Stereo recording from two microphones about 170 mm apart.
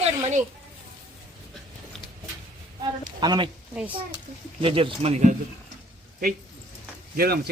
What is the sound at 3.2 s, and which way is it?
Speech, 25° right (ahead or behind).